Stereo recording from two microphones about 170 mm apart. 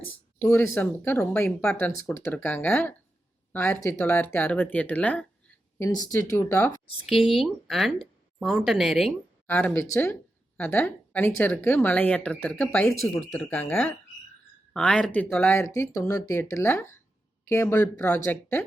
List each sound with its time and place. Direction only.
0.1 s speech: 15° left (ahead or behind)
5.8 s speech: 20° left (ahead or behind)
6.3 s speech: 10° left (ahead or behind)
7.3 s speech: centre (ahead or behind)
9.5 s speech: 10° left (ahead or behind)